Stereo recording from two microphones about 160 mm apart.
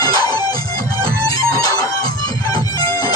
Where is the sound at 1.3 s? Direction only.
20° left (ahead or behind).